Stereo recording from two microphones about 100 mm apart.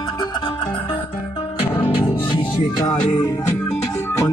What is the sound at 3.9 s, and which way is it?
Music, 30° left (ahead or behind).